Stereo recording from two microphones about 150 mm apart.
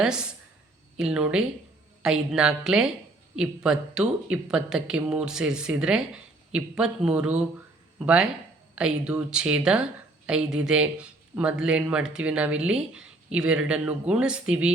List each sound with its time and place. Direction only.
0.0 s speech: 5° right (ahead or behind)